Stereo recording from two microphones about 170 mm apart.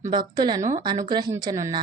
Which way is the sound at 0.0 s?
25° right (ahead or behind).